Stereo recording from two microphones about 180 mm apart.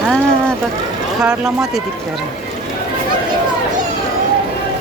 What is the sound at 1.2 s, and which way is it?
Speech, 5° right (ahead or behind).